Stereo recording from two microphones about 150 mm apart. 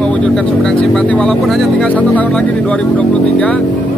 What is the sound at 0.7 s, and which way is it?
Speech, 5° left (ahead or behind).